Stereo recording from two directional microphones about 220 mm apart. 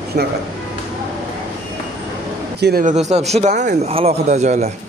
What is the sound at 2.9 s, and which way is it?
Speech, 30° right (ahead or behind).